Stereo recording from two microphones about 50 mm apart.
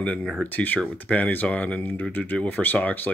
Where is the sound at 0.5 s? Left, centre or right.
Left.